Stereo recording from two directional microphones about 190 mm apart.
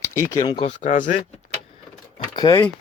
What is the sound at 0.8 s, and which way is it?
Speech, 40° left (ahead or behind).